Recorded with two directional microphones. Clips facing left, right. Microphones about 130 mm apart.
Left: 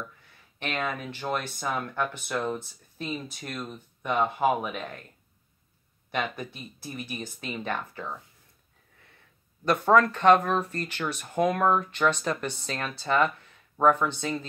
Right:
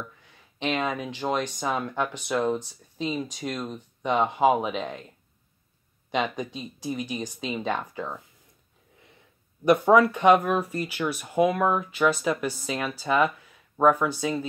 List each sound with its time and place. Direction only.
0.6 s speech: 15° right (ahead or behind)
6.1 s speech: 15° right (ahead or behind)
9.7 s speech: 15° right (ahead or behind)